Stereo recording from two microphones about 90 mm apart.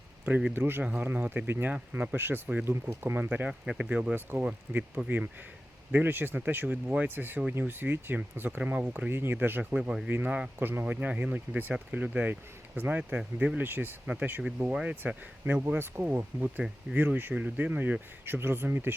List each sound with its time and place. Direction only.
0.3 s speech: 15° right (ahead or behind)
15.0 s speech: 20° right (ahead or behind)